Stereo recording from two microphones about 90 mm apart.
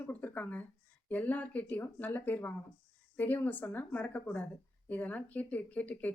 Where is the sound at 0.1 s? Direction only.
20° left (ahead or behind).